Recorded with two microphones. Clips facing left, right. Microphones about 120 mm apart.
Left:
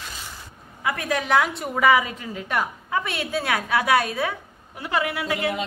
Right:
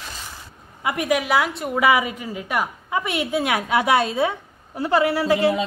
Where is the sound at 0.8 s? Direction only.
15° right (ahead or behind).